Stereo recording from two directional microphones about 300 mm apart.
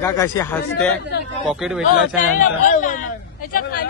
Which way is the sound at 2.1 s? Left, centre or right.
Left.